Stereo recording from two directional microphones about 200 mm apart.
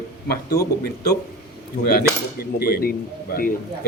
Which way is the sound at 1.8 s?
50° left (ahead or behind).